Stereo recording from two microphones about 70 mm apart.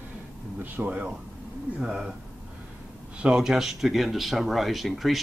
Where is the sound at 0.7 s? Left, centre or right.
Centre.